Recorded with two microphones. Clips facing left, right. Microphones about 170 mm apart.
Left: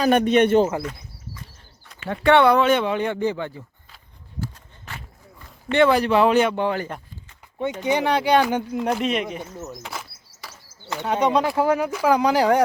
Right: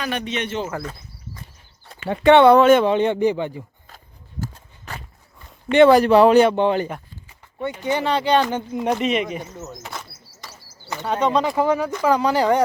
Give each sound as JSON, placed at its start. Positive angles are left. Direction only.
{"t": 0.0, "sound": "speech", "side_deg": 45}
{"t": 2.0, "sound": "speech", "side_deg": -20}
{"t": 2.6, "sound": "speech", "side_deg": -45}
{"t": 2.9, "sound": "speech", "side_deg": -20}
{"t": 3.8, "sound": "a sound", "side_deg": -45}
{"t": 5.9, "sound": "speech", "side_deg": -40}
{"t": 6.8, "sound": "a sound", "side_deg": -10}
{"t": 7.8, "sound": "speech", "side_deg": 15}
{"t": 8.8, "sound": "speech", "side_deg": 0}
{"t": 9.8, "sound": "bird", "side_deg": 5}
{"t": 10.9, "sound": "speech", "side_deg": 10}